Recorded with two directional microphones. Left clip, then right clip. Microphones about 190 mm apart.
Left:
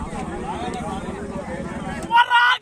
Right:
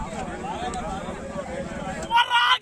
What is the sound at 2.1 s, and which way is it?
Vehicle, 10° left (ahead or behind).